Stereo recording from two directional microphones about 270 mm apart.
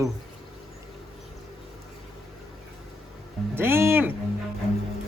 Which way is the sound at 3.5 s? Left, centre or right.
Centre.